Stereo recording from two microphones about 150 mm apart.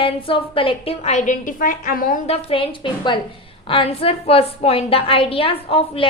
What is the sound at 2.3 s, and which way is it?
A woman's voice, 40° left (ahead or behind).